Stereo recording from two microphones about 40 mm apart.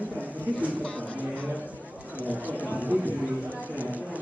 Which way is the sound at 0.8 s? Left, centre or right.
Left.